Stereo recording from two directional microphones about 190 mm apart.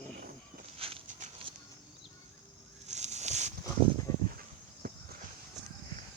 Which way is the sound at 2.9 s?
35° right (ahead or behind).